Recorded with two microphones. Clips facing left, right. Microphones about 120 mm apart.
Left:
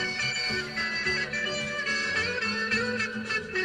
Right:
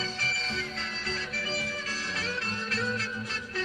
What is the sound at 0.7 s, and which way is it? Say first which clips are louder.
Music: left 3 dB; 25° right (ahead or behind).